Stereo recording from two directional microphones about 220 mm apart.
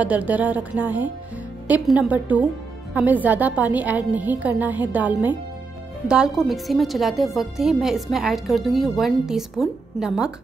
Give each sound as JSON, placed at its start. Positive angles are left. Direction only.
{"t": 0.0, "sound": "a woman's voice", "side_deg": -5}